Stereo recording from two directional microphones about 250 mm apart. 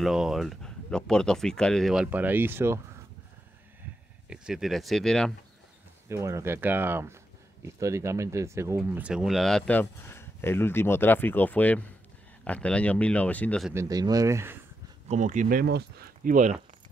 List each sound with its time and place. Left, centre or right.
0.0 s speech: centre
4.3 s speech: centre
6.0 s speech: centre
13.7 s speech: centre
15.0 s speech: right